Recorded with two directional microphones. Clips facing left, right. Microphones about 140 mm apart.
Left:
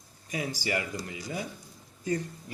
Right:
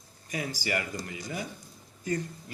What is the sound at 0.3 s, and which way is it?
Speech, 10° left (ahead or behind).